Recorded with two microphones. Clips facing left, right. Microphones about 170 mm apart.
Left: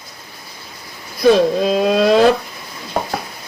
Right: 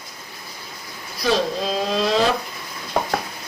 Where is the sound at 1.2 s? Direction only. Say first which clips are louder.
Left 9 dB; 55° left (ahead or behind).